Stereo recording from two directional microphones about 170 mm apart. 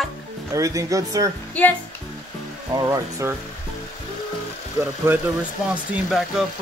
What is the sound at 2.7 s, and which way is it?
Speech, 20° right (ahead or behind).